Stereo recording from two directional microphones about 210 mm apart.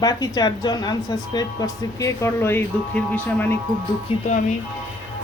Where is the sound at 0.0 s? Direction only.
20° left (ahead or behind).